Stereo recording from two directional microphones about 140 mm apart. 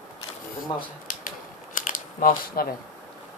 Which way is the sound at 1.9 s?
90° left.